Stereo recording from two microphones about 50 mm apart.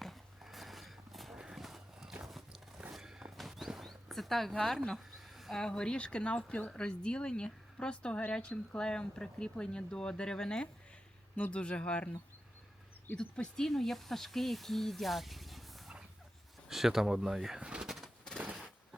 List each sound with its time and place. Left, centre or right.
0.0 s a sound: centre
1.4 s horse: centre
2.2 s biting: centre
2.9 s walk: centre
3.3 s a sound: centre
5.5 s speech: centre
11.3 s speech: left
13.1 s speech: centre
17.6 s bird: right